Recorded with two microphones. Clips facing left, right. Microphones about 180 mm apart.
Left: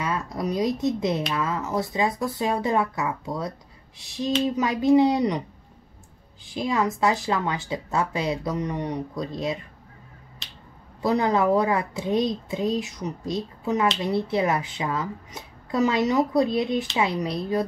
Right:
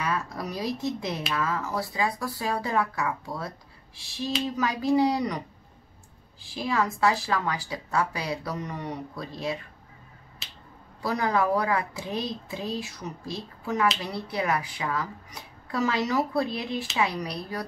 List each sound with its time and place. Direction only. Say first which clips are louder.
0.0 s speech: left 3 dB; 20° left (ahead or behind)
6.4 s speech: left 3 dB; 20° left (ahead or behind)
10.4 s finger snapping: even; 5° right (ahead or behind)
11.0 s speech: left 4 dB; 20° left (ahead or behind)